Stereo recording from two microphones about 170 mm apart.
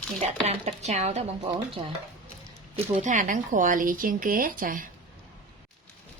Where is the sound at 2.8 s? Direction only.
45° right (ahead or behind).